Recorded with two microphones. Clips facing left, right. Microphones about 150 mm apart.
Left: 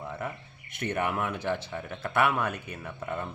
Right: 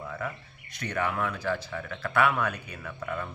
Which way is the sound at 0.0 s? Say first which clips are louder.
Even; 25° left (ahead or behind).